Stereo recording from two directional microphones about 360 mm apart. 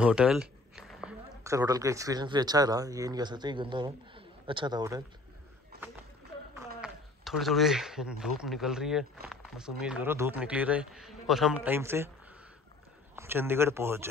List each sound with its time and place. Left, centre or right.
0.0 s speech: centre
5.7 s a sound: right
6.8 s speech: centre
13.1 s speech: centre